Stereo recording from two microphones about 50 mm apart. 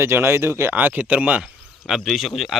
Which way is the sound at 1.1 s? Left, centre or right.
Right.